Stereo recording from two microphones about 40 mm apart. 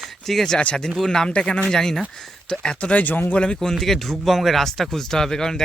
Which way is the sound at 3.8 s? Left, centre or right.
Centre.